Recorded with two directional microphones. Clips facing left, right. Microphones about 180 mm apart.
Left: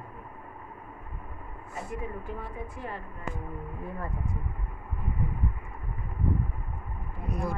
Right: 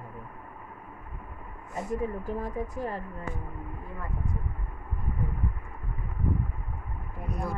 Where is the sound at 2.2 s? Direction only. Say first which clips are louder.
Right 6 dB; 40° right (ahead or behind).